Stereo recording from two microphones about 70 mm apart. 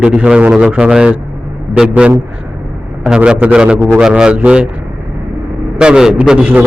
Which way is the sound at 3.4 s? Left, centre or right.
Centre.